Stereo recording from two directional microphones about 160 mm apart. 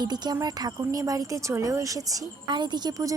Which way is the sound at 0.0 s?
25° right (ahead or behind).